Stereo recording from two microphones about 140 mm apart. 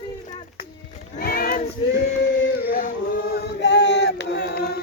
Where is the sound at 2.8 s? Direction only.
75° left (ahead or behind).